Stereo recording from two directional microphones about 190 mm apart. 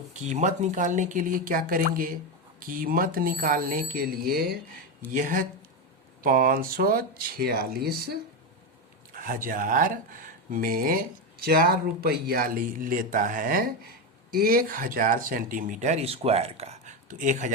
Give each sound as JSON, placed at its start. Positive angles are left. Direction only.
{"t": 0.1, "sound": "speech", "side_deg": -35}